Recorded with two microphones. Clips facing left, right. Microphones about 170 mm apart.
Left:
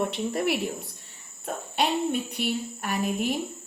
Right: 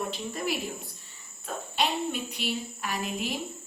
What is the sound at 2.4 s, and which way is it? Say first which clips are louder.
Speech: left 4 dB; 55° left (ahead or behind).